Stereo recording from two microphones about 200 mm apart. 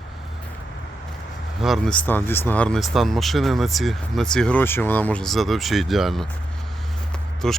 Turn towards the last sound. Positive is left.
turn(degrees=0)  # may be behind; listen again after turning